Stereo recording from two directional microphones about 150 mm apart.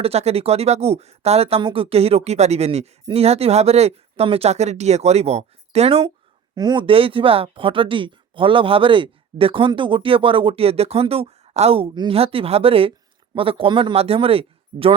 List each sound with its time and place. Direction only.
0.0 s speech: 45° right (ahead or behind)
6.6 s speech: 30° right (ahead or behind)